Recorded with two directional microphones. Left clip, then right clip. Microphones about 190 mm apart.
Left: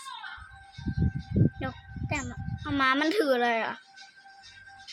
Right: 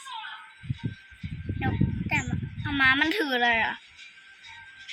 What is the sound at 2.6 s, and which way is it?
A woman's voice, 50° left (ahead or behind).